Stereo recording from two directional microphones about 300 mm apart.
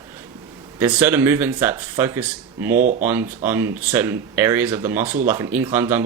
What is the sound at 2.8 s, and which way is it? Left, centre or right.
Speech, right.